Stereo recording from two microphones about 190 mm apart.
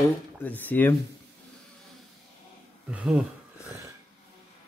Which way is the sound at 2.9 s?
5° right (ahead or behind).